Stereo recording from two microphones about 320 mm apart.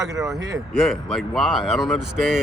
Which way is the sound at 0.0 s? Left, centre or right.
Centre.